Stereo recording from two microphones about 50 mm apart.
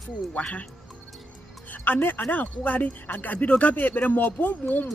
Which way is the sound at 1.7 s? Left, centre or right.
Left.